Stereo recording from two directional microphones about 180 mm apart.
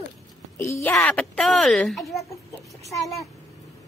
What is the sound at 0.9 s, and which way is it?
Speech, 5° left (ahead or behind).